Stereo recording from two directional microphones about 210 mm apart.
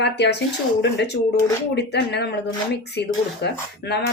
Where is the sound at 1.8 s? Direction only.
55° left (ahead or behind).